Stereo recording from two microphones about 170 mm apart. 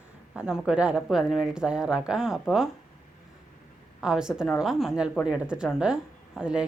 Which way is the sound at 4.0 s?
5° right (ahead or behind).